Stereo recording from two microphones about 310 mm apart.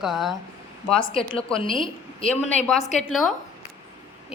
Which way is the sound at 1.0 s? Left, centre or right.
Centre.